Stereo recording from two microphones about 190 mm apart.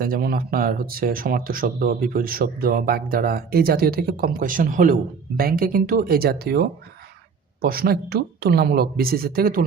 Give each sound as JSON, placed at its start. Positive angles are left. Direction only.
{"t": 0.0, "sound": "speech", "side_deg": -50}